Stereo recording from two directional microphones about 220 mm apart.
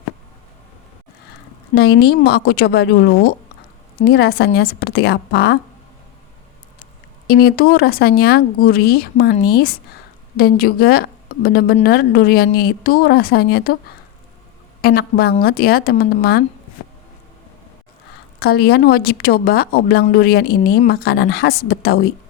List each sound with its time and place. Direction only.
1.7 s a woman's voice: 45° left (ahead or behind)
7.3 s a woman's voice: 45° left (ahead or behind)
14.8 s a woman's voice: 45° left (ahead or behind)
18.3 s a woman's voice: 45° left (ahead or behind)